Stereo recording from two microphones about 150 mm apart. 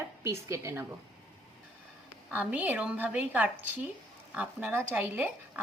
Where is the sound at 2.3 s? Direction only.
10° right (ahead or behind).